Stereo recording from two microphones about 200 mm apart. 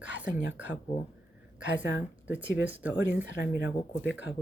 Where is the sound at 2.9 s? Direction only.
60° left (ahead or behind).